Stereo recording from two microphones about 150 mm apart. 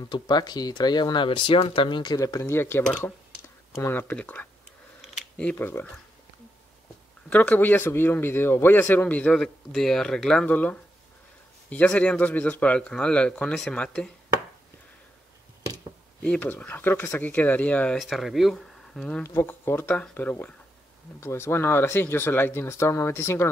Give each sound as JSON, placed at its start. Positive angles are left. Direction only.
{"t": 0.1, "sound": "speech", "side_deg": 30}
{"t": 7.2, "sound": "speech", "side_deg": 10}
{"t": 16.2, "sound": "speech", "side_deg": 10}
{"t": 17.9, "sound": "speech", "side_deg": 0}
{"t": 19.2, "sound": "speech", "side_deg": 15}